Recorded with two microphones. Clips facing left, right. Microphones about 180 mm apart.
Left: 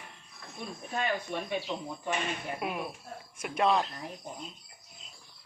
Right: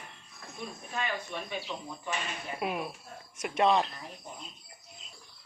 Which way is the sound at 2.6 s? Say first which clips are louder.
Right 1 dB; centre (ahead or behind).